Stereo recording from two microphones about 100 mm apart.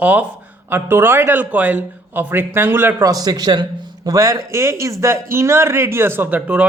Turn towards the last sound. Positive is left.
turn(degrees=-15)  # may be behind; listen again after turning